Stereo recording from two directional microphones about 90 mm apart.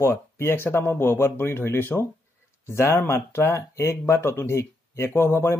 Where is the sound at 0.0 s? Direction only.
30° left (ahead or behind).